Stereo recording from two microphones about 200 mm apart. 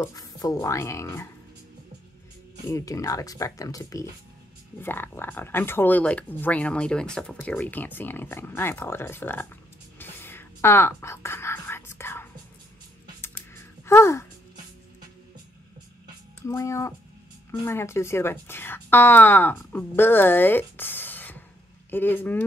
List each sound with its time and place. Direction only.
0.0 s speech: 20° left (ahead or behind)
2.7 s speech: 15° left (ahead or behind)
9.9 s whispering: 10° left (ahead or behind)
13.8 s music: 15° left (ahead or behind)
16.4 s a woman's voice: 15° left (ahead or behind)